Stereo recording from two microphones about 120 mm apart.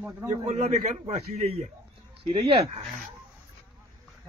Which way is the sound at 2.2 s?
50° right (ahead or behind).